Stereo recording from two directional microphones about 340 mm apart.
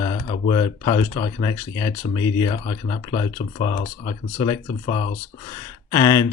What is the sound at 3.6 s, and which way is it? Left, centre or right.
Speech, left.